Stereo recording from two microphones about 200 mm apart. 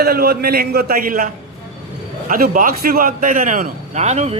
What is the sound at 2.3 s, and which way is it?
A man's voice, 45° right (ahead or behind).